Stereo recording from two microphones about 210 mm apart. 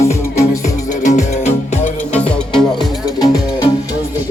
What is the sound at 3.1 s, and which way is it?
Music, 20° left (ahead or behind).